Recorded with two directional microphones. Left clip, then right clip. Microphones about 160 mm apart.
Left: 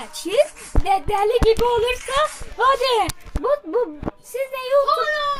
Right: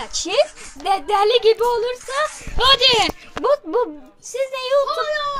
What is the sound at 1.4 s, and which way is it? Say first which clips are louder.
Speech: right 1 dB; 20° right (ahead or behind).